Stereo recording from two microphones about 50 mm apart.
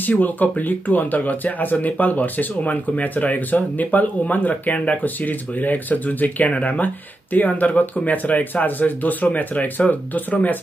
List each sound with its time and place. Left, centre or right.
0.0 s speech: left